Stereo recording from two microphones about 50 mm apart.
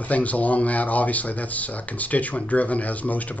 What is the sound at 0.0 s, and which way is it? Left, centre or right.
Speech, left.